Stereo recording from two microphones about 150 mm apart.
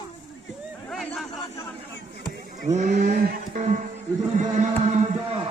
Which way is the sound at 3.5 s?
55° right (ahead or behind).